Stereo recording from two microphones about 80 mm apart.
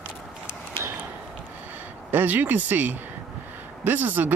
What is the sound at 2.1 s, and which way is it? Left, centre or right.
Speech, right.